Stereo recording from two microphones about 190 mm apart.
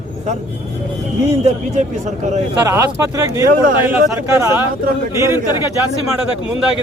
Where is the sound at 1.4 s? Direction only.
40° right (ahead or behind).